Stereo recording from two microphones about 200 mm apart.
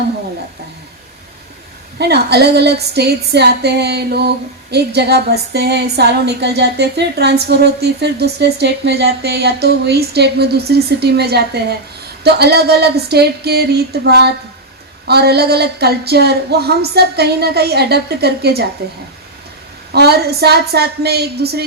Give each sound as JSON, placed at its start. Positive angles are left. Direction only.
{"t": 2.0, "sound": "a woman's voice", "side_deg": -55}